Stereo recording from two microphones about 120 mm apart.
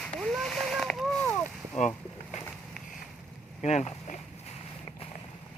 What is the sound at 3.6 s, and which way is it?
Speech, 75° left (ahead or behind).